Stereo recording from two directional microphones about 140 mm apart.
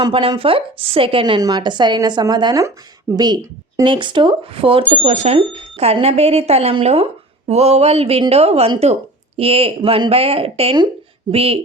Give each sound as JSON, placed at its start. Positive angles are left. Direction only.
{"t": 0.0, "sound": "a woman's voice", "side_deg": -35}
{"t": 5.0, "sound": "a woman's voice", "side_deg": -55}